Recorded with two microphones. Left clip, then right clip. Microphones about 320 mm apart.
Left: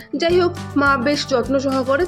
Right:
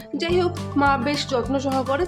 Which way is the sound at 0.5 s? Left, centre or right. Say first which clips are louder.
Left 3 dB; centre.